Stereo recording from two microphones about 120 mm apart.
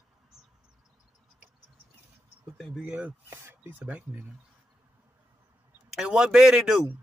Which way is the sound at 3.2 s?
20° right (ahead or behind).